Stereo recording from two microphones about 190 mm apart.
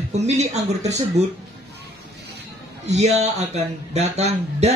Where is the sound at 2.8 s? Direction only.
35° right (ahead or behind).